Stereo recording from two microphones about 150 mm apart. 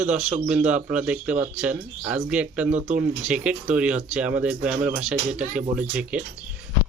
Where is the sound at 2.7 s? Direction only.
50° right (ahead or behind).